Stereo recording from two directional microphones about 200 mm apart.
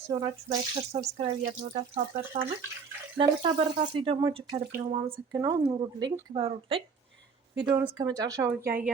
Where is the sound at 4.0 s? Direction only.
25° right (ahead or behind).